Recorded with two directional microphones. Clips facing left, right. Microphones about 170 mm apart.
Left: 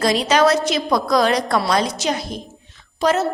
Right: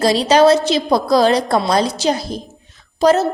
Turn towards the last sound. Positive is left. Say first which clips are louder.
# right 5 dB
turn(degrees=-35)  # may be behind; listen again after turning